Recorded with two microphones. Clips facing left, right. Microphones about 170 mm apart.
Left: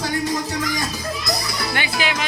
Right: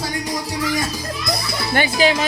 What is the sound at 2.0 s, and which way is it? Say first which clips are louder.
Speech: right 8 dB; 35° right (ahead or behind).